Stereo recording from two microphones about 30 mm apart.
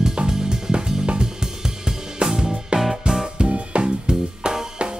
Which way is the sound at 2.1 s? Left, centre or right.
Right.